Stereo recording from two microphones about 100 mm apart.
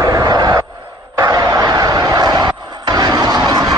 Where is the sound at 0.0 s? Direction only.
40° right (ahead or behind).